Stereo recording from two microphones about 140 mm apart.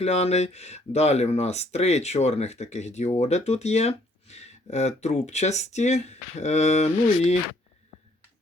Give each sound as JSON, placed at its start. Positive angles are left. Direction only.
{"t": 0.0, "sound": "speech", "side_deg": 50}